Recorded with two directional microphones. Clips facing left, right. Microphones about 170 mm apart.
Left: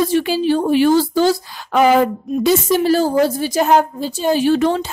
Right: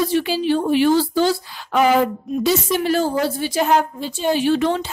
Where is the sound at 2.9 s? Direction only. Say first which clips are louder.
Left 4 dB; 40° left (ahead or behind).